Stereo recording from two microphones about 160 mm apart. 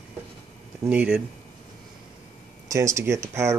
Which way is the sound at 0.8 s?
10° right (ahead or behind).